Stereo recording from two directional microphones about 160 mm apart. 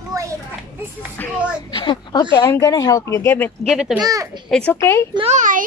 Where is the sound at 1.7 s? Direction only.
30° left (ahead or behind); by 3.7 s 15° left (ahead or behind).